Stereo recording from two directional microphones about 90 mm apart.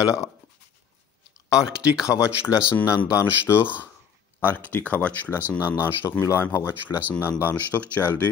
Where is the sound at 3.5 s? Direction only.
30° left (ahead or behind).